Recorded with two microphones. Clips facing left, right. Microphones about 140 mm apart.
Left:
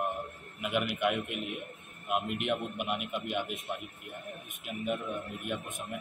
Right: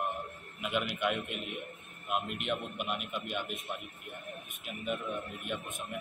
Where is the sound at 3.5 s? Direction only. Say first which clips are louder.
Left 2 dB; centre (ahead or behind).